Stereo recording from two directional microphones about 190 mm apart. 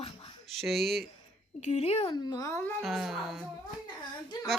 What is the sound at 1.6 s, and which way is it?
Speech, 35° left (ahead or behind).